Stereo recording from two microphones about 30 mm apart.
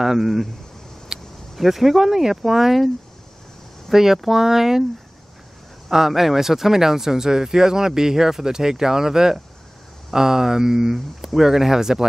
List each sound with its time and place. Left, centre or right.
0.0 s speech: centre
1.1 s vehicle: centre
1.5 s speech: centre
3.9 s speech: centre
5.9 s speech: centre